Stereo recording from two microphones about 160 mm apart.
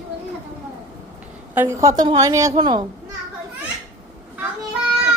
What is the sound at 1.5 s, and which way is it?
A woman's voice, 15° right (ahead or behind).